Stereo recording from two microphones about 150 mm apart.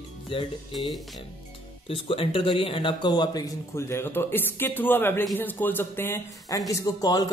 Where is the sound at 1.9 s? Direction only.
35° left (ahead or behind).